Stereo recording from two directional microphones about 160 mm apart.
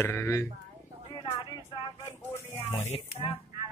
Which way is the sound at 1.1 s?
25° left (ahead or behind).